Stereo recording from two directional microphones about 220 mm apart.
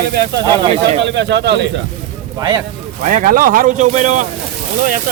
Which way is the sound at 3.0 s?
40° right (ahead or behind).